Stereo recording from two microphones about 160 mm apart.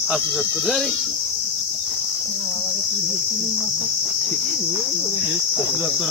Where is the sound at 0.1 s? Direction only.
Centre (ahead or behind).